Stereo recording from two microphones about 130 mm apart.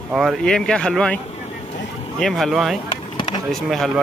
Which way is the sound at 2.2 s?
Centre (ahead or behind).